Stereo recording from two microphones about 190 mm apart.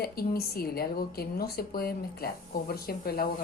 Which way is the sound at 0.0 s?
55° left (ahead or behind).